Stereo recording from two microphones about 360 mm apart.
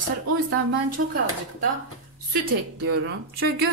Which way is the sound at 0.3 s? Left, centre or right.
Right.